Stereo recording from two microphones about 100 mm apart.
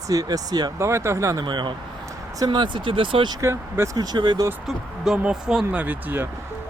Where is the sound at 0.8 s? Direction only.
30° right (ahead or behind).